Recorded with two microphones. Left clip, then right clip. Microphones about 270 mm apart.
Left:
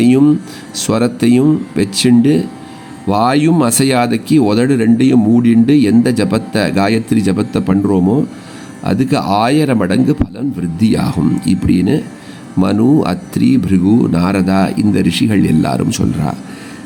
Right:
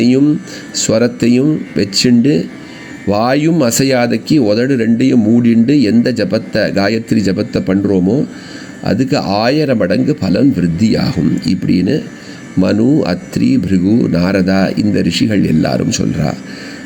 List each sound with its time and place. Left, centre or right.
0.8 s speech: centre